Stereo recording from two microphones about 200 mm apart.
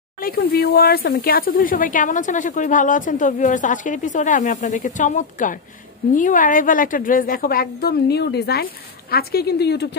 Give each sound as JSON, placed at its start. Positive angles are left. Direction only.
{"t": 0.2, "sound": "a woman's voice", "side_deg": 50}